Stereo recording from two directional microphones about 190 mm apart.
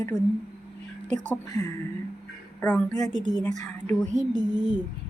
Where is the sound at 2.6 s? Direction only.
5° left (ahead or behind).